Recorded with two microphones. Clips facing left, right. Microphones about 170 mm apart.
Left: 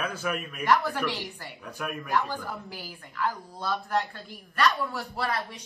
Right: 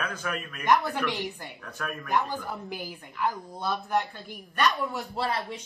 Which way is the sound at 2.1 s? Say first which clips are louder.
Right 1 dB; 20° right (ahead or behind).